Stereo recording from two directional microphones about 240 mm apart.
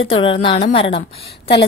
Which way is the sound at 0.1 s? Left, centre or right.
Left.